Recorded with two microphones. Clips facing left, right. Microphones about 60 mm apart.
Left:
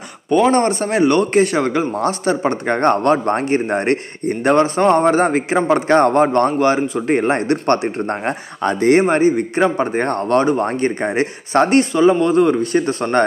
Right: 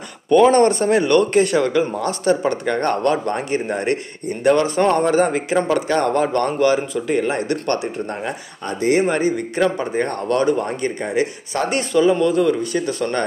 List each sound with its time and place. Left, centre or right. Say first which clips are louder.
0.3 s speech: right 2 dB; centre; by 9.0 s left
9.1 s speech: left 5 dB; left
9.8 s speech: left 3 dB; left
11.8 s speech: left 2 dB; left